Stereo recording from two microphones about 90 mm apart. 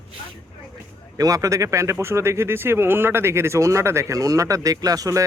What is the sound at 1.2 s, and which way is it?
Speech, 40° right (ahead or behind).